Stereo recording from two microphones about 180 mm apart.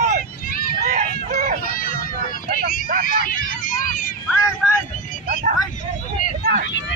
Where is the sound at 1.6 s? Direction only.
50° left (ahead or behind).